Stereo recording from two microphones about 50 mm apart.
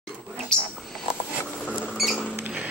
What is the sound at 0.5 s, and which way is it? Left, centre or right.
Speech, centre.